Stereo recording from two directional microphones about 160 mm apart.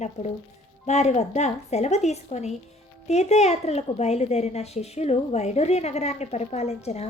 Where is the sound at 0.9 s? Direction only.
45° left (ahead or behind).